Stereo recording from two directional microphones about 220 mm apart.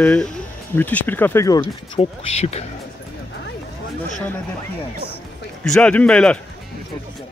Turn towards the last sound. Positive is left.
turn(degrees=5)  # may be behind; listen again after turning